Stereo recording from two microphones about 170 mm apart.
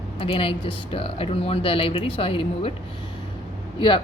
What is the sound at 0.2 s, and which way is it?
Speech, 30° left (ahead or behind).